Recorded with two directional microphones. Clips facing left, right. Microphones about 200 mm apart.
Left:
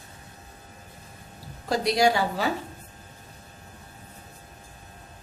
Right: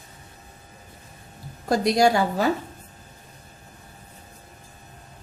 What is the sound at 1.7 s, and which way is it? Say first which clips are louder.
Speech: right 3 dB; 45° right (ahead or behind).